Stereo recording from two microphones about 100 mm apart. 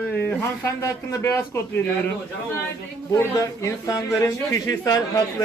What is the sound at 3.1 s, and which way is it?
Speech, 30° left (ahead or behind).